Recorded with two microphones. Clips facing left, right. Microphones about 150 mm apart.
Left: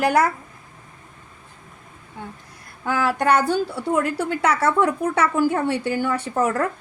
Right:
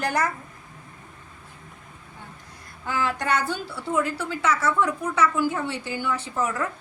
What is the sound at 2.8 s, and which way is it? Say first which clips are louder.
A woman's voice: left 6 dB; 55° left (ahead or behind).